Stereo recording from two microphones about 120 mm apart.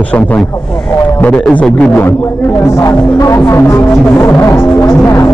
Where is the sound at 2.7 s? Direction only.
25° left (ahead or behind).